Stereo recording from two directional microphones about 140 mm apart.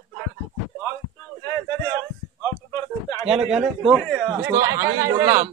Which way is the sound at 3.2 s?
5° right (ahead or behind).